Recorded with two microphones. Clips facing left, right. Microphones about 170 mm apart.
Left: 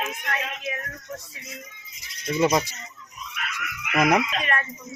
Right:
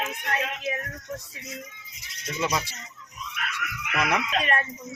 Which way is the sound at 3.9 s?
40° left (ahead or behind).